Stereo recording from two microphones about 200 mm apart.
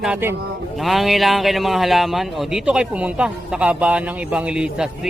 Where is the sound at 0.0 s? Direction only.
10° right (ahead or behind).